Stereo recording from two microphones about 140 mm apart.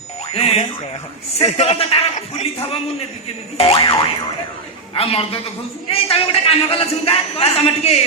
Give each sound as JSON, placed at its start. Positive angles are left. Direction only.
{"t": 0.3, "sound": "speech", "side_deg": 45}